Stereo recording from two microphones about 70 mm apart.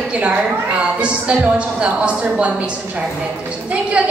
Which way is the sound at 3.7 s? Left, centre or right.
Centre.